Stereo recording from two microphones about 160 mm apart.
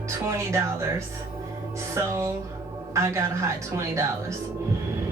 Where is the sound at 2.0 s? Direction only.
20° right (ahead or behind).